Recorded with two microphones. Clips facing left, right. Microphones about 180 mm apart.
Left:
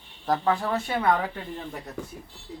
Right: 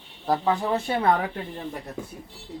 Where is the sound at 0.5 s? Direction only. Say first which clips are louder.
Right 2 dB; 20° right (ahead or behind).